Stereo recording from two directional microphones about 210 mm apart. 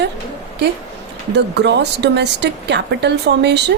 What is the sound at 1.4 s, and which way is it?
A woman's voice, 55° right (ahead or behind).